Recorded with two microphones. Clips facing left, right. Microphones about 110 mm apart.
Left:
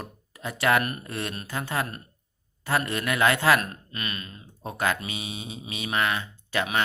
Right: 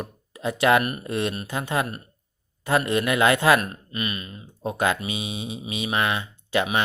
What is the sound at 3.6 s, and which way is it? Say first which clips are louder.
Speech: right 4 dB; 10° right (ahead or behind).